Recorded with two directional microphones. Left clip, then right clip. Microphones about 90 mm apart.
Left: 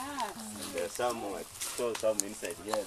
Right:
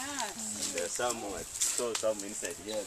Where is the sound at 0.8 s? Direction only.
20° left (ahead or behind).